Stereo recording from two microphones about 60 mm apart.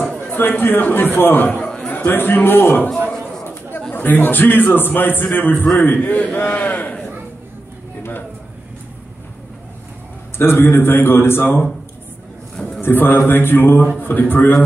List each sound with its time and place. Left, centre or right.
0.3 s a man's voice: left
3.9 s a man's voice: left
10.3 s a man's voice: left
12.5 s a sound: centre
12.8 s a man's voice: left